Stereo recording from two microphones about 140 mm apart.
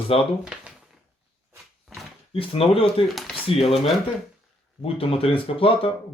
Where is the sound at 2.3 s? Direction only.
45° left (ahead or behind).